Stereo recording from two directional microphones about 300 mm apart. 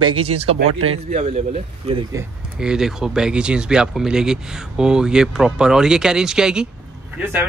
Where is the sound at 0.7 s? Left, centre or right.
Right.